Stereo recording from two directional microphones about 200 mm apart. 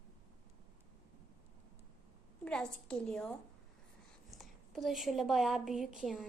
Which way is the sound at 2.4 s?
5° left (ahead or behind).